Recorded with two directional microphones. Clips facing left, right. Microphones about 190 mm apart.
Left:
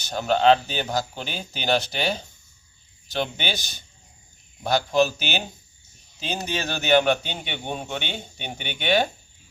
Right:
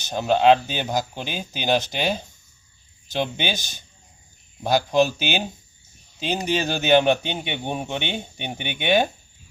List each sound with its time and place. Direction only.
0.1 s speech: 15° right (ahead or behind)
3.2 s speech: 15° right (ahead or behind)
4.7 s speech: 15° right (ahead or behind)